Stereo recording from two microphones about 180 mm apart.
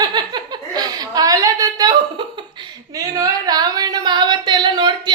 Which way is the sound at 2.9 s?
20° right (ahead or behind).